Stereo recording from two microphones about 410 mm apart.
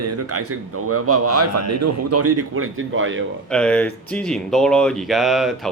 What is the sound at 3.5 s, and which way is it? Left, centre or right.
Speech, centre.